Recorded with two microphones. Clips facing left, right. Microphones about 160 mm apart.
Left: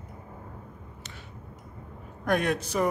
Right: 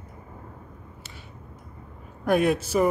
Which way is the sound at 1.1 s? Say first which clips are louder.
Left 1 dB; 10° right (ahead or behind).